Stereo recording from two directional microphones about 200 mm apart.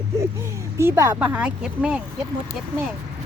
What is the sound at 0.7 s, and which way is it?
Speech, 15° right (ahead or behind).